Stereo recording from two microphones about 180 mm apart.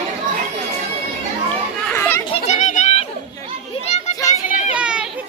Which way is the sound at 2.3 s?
40° left (ahead or behind).